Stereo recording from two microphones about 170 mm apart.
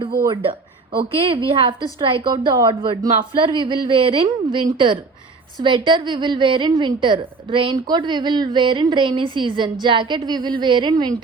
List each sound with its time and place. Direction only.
0.9 s a woman's voice: 30° right (ahead or behind)